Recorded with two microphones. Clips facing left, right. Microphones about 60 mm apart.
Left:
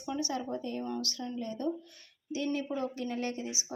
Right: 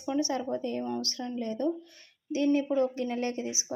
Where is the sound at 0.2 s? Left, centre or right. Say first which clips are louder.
Right 6 dB; right.